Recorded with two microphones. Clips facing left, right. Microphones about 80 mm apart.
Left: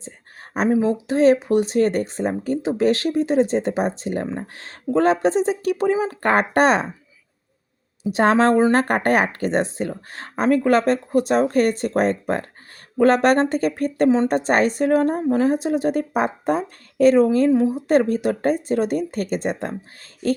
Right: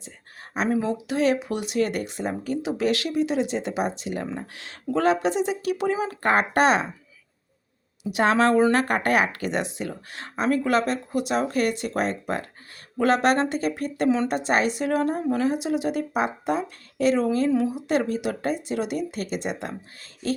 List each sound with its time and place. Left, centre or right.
0.7 s speech: left
8.1 s speech: left